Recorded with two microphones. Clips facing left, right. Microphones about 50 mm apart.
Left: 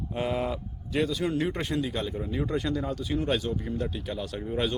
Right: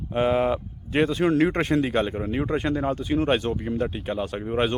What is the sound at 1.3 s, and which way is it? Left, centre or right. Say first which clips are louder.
Speech: right 8 dB; right.